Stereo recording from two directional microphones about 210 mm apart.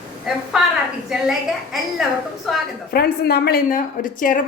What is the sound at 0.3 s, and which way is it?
A woman's voice, centre (ahead or behind).